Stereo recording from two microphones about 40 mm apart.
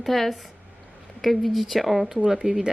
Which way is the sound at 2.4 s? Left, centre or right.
Right.